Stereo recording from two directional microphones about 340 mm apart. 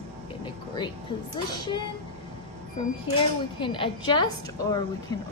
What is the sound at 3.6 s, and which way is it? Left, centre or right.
Speech, centre.